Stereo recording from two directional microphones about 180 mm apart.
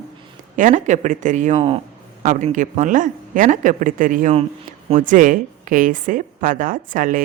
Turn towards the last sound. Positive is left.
turn(degrees=-50)  # may be behind; listen again after turning